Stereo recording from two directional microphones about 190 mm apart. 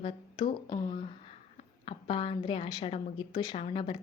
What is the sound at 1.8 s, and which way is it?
A woman's voice, 30° left (ahead or behind).